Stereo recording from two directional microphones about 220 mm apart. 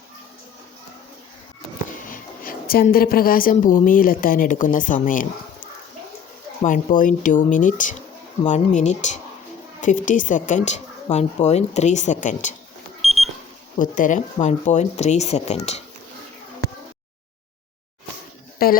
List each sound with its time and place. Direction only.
2.0 s a woman's voice: 40° left (ahead or behind)
13.0 s alarm clock: centre (ahead or behind)
13.7 s a woman's voice: 35° left (ahead or behind)
18.6 s a woman's voice: 45° left (ahead or behind)